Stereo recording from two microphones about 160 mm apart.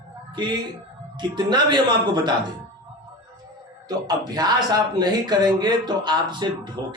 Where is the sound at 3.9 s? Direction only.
25° right (ahead or behind).